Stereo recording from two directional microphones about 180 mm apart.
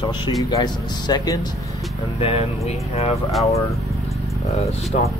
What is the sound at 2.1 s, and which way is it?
Speech, 35° left (ahead or behind).